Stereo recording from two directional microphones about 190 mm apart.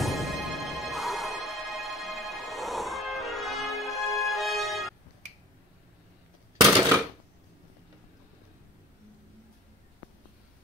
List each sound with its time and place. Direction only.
0.0 s music: centre (ahead or behind)